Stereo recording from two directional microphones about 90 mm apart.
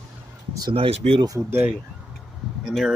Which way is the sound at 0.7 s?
90° right.